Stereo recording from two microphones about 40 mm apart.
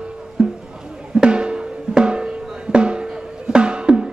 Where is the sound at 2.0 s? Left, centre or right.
Right.